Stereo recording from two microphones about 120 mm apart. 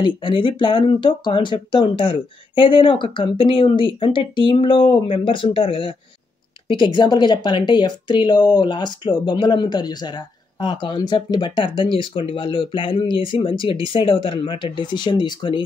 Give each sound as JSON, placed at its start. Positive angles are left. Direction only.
{"t": 0.0, "sound": "speech", "side_deg": 45}